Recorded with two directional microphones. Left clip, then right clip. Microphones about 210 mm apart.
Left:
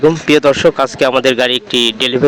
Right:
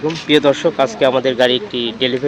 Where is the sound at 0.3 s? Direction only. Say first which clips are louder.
Even; 30° left (ahead or behind).